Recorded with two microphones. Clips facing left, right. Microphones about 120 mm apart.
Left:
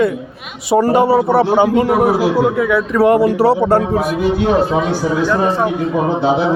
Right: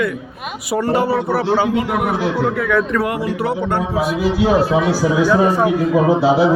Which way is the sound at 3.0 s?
35° left (ahead or behind).